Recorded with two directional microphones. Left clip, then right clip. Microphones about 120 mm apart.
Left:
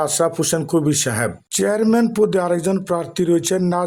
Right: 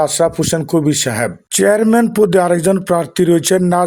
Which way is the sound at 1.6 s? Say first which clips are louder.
Right 6 dB; 40° right (ahead or behind).